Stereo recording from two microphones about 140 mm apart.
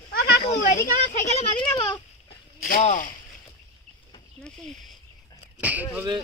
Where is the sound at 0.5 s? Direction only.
70° left (ahead or behind).